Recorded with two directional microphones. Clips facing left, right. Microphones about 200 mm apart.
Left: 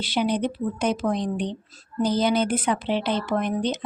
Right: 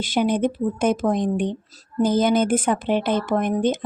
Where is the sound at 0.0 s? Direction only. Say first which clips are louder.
Right 3 dB; 50° right (ahead or behind).